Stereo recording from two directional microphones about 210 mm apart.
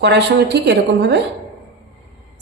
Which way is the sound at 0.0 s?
50° right (ahead or behind).